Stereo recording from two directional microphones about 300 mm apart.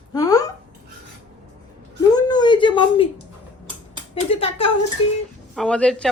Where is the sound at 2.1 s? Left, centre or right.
Centre.